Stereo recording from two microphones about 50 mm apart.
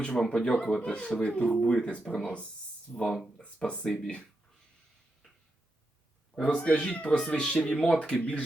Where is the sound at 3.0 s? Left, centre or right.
Centre.